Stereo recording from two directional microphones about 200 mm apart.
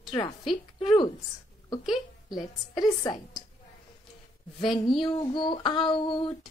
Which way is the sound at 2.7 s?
20° left (ahead or behind).